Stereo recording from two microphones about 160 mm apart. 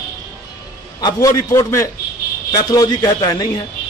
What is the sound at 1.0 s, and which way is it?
Speech, 20° left (ahead or behind).